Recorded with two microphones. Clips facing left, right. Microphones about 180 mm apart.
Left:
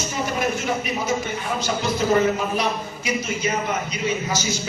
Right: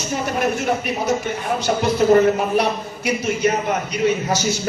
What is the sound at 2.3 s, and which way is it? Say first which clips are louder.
A man's voice: right 4 dB; 65° right (ahead or behind).